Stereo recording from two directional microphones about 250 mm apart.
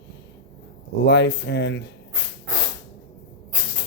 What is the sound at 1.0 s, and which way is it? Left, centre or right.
Speech, left.